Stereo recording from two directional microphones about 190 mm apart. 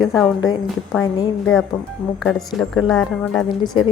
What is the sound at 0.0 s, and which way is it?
Speech, centre (ahead or behind).